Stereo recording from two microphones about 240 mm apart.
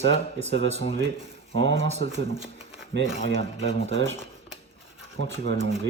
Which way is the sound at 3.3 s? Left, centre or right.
Left.